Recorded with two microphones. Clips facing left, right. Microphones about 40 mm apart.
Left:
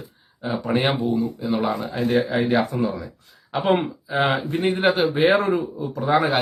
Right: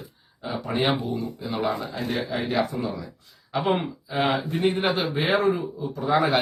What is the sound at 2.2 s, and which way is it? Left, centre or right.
Speech, left.